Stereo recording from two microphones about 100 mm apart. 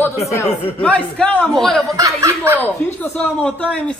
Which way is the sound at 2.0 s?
30° right (ahead or behind).